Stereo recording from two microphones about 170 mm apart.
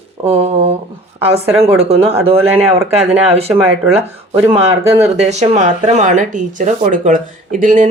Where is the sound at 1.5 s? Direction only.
35° right (ahead or behind).